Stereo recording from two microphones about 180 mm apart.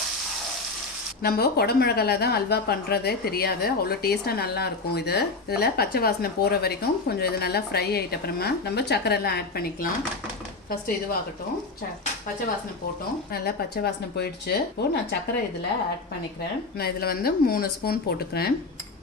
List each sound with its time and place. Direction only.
1.2 s speech: 60° left (ahead or behind)
13.3 s speech: 60° left (ahead or behind)
16.7 s speech: 60° left (ahead or behind)